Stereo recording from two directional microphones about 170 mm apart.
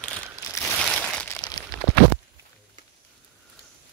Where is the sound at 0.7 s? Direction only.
5° left (ahead or behind).